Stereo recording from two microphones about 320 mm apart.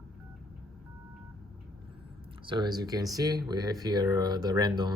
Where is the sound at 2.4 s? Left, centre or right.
Centre.